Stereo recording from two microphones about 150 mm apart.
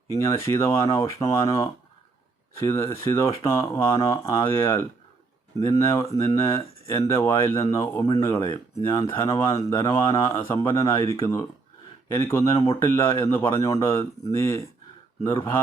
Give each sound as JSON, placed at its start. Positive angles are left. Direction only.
{"t": 0.1, "sound": "speech", "side_deg": 20}